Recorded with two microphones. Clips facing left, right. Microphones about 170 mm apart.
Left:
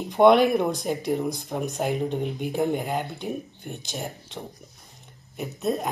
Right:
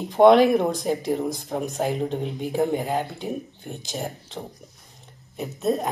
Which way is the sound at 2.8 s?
35° right (ahead or behind).